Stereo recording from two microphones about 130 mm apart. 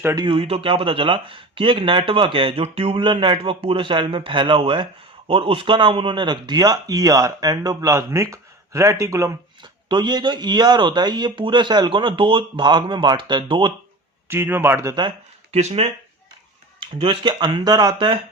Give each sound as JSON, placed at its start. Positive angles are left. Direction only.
{"t": 0.3, "sound": "a man's voice", "side_deg": -45}
{"t": 9.9, "sound": "speech", "side_deg": -35}
{"t": 14.3, "sound": "speech", "side_deg": -15}
{"t": 15.5, "sound": "speech", "side_deg": -50}
{"t": 16.8, "sound": "speech", "side_deg": -40}